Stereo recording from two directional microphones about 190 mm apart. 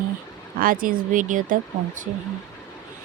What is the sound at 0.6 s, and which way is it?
Speech, 45° right (ahead or behind).